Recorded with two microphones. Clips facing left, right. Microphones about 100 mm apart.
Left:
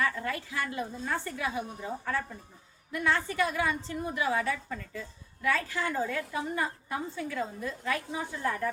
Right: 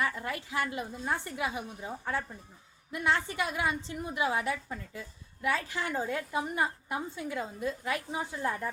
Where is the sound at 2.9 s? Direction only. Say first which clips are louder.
Left 1 dB; 20° right (ahead or behind).